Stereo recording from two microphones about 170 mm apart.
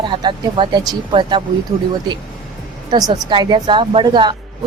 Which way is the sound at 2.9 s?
20° right (ahead or behind).